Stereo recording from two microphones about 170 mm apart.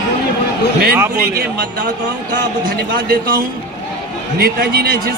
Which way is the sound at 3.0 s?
55° right (ahead or behind).